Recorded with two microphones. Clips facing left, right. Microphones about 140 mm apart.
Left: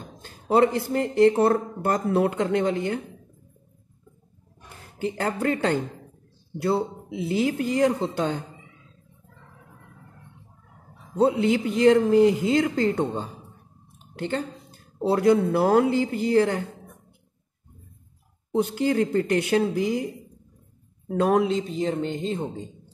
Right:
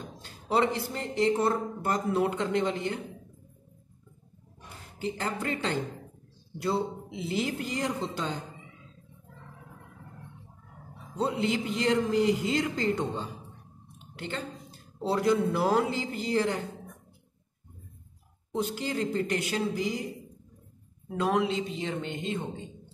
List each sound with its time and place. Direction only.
0.2 s speech: 45° left (ahead or behind)
5.0 s speech: 55° left (ahead or behind)
7.4 s speech: 55° left (ahead or behind)
11.1 s speech: 60° left (ahead or behind)
13.9 s a sound: 45° left (ahead or behind)
15.0 s speech: 55° left (ahead or behind)
18.5 s speech: 55° left (ahead or behind)
21.1 s speech: 50° left (ahead or behind)